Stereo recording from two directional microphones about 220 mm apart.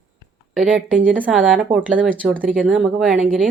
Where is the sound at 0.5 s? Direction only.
Centre (ahead or behind).